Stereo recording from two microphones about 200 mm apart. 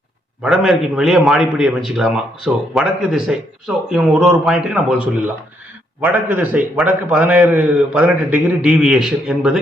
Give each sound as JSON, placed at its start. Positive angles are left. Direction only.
{"t": 0.4, "sound": "a man's voice", "side_deg": 0}